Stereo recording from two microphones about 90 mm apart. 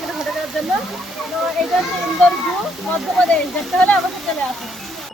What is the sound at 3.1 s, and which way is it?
Speech, 10° left (ahead or behind).